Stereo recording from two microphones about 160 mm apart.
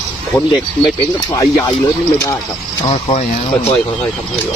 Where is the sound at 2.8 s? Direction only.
35° left (ahead or behind).